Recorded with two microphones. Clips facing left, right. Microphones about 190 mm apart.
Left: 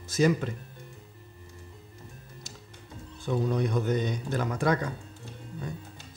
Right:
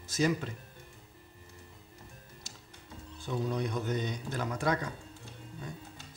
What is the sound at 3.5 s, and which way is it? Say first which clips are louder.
A man's voice: left 5 dB; 60° left (ahead or behind).